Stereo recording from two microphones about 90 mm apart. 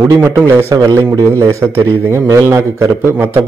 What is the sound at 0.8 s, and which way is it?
A man's voice, 40° right (ahead or behind).